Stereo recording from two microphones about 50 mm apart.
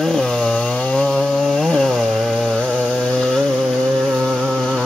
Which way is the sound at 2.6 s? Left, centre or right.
Left.